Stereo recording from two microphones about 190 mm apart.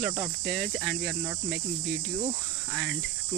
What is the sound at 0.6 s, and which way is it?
Cricket, centre (ahead or behind).